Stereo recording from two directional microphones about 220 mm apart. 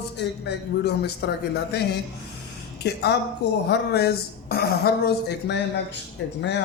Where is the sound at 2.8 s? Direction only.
50° left (ahead or behind).